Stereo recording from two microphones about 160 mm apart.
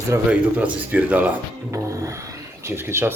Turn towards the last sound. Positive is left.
turn(degrees=-15)  # may be behind; listen again after turning